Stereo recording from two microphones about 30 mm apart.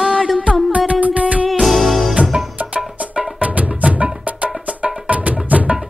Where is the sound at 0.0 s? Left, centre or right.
Right.